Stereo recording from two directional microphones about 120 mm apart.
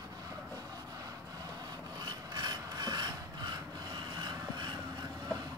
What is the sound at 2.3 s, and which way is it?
Filing, 35° right (ahead or behind).